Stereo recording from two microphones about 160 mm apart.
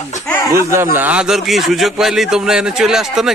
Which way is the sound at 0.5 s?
15° right (ahead or behind).